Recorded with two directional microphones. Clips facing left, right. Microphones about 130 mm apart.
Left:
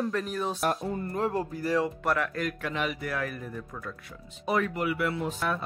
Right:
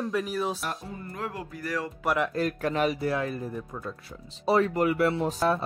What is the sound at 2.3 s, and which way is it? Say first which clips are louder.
Speech: right 5 dB; 35° right (ahead or behind).